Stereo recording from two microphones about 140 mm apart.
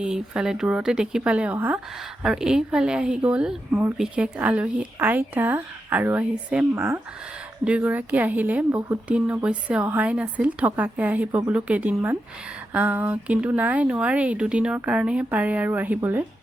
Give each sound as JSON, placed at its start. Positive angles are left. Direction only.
{"t": 0.0, "sound": "speech", "side_deg": -5}